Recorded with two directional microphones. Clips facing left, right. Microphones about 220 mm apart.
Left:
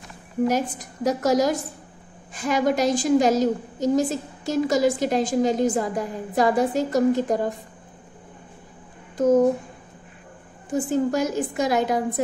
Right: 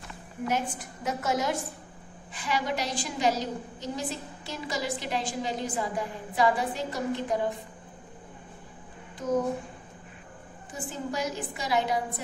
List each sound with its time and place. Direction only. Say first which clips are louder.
0.5 s a woman's voice: left 6 dB; 40° left (ahead or behind)
10.7 s a woman's voice: left 13 dB; 45° left (ahead or behind)